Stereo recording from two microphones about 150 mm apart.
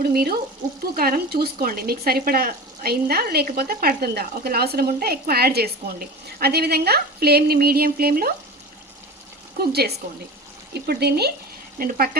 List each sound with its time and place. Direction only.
0.1 s speech: 90° right
0.9 s speech: 75° right (ahead or behind)
9.6 s speech: 90° right
11.8 s speech: 80° right